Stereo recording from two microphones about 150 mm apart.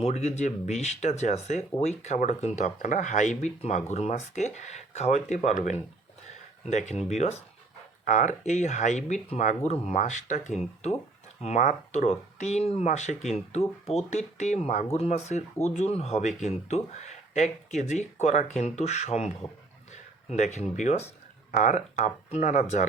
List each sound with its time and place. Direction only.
0.0 s speech: 45° left (ahead or behind)
20.3 s speech: 50° left (ahead or behind)